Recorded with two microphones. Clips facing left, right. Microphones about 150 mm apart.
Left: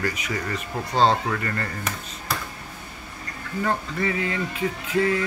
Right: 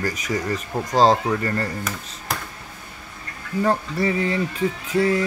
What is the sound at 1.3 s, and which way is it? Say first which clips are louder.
Speech: right 4 dB; 30° right (ahead or behind).